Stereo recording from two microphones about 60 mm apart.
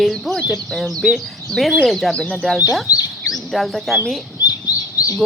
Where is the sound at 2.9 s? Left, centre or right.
Left.